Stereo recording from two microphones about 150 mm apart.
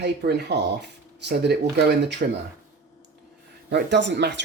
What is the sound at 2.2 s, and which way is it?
Speech, 70° right (ahead or behind).